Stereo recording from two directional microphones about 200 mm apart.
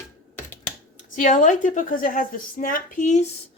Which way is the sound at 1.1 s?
40° left (ahead or behind).